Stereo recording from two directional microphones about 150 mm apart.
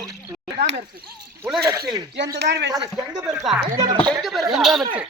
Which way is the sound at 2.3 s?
90° right.